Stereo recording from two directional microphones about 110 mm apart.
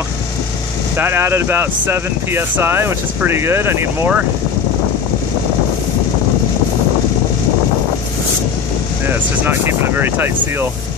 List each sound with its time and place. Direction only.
0.9 s speech: 20° right (ahead or behind)
9.0 s speech: 20° right (ahead or behind)